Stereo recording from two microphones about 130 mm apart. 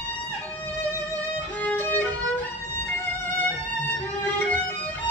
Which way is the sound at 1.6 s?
15° left (ahead or behind).